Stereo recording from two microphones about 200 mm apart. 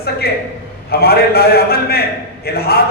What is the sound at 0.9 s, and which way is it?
A man's voice, 50° left (ahead or behind).